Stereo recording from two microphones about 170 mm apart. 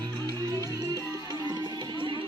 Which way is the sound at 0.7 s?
20° right (ahead or behind).